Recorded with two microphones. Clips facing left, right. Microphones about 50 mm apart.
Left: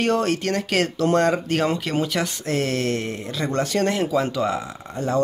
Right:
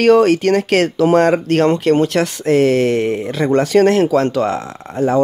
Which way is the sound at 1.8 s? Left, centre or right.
Right.